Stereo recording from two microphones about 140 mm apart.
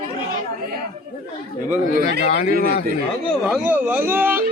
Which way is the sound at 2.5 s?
90° right.